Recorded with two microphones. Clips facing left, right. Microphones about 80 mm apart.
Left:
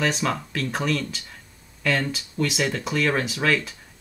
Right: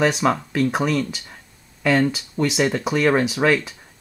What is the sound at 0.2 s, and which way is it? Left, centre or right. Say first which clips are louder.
Speech: right 7 dB; right.